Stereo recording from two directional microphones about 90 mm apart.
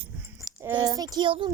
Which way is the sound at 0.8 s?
45° right (ahead or behind).